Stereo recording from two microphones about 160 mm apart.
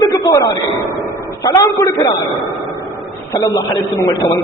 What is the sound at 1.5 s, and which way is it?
Speech, 20° left (ahead or behind).